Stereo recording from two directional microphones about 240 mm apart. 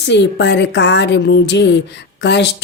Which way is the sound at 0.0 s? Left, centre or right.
Left.